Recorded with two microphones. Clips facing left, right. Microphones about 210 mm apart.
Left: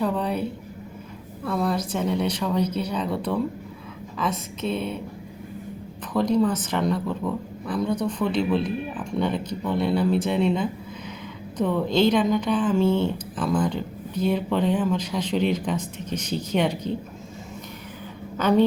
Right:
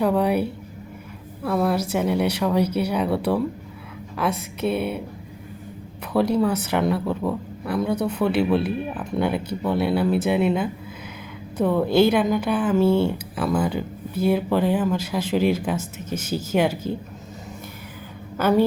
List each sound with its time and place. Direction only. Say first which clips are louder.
0.0 s a woman's voice: right 5 dB; 10° right (ahead or behind)
1.5 s speech: right 3 dB; 5° right (ahead or behind)
6.1 s speech: right 1 dB; 10° right (ahead or behind)
7.2 s speech: right 2 dB; 25° right (ahead or behind)
7.8 s speech: right 2 dB; 10° right (ahead or behind)
18.3 s a woman's voice: right 1 dB; 5° right (ahead or behind)